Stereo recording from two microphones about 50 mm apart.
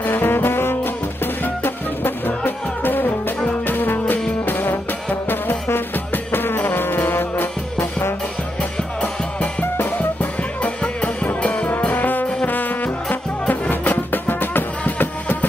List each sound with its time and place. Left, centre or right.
0.0 s music: left
9.0 s music: left